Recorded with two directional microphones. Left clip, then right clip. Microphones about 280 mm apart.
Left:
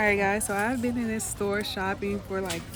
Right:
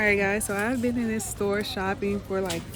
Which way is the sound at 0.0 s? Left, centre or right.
Centre.